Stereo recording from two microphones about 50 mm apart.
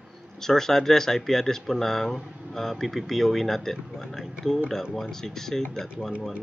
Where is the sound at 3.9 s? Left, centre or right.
Centre.